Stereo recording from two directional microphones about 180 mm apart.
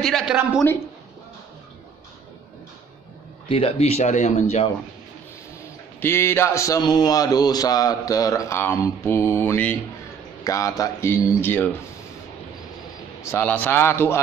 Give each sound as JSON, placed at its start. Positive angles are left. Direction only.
{"t": 0.0, "sound": "a sound", "side_deg": 0}
{"t": 3.4, "sound": "speech", "side_deg": 30}
{"t": 5.9, "sound": "a man's voice", "side_deg": 15}
{"t": 13.2, "sound": "a man's voice", "side_deg": 10}